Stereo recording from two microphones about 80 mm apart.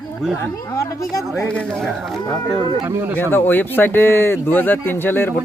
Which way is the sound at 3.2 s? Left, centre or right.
Left.